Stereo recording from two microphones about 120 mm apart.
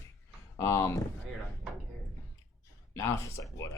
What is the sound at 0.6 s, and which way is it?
Speech, 30° left (ahead or behind).